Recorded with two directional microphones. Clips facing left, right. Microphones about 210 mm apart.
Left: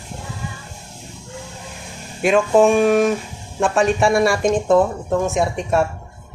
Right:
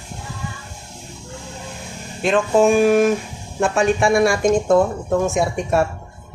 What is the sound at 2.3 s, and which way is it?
Speech, 5° right (ahead or behind).